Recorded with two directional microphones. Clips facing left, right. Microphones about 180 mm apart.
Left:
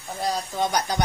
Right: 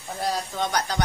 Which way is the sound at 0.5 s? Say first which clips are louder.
Left 2 dB; 10° left (ahead or behind).